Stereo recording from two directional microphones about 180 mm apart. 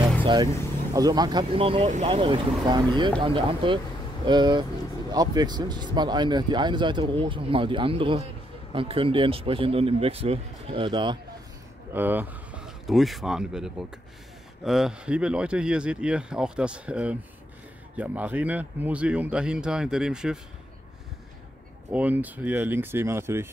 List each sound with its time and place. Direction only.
0.2 s vehicle: 25° right (ahead or behind)
0.9 s speech: 20° right (ahead or behind)
11.9 s speech: 10° right (ahead or behind)
21.9 s speech: 10° right (ahead or behind)